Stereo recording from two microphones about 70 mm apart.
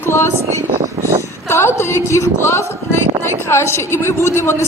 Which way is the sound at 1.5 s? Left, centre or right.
Left.